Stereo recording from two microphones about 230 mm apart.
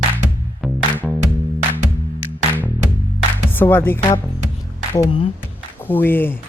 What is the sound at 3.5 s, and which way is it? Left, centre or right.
Speech, centre.